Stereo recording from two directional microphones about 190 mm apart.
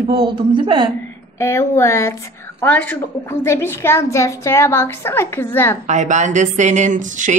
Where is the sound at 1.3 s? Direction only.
15° left (ahead or behind).